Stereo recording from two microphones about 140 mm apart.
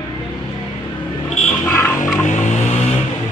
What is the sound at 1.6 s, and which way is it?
Music, 15° left (ahead or behind).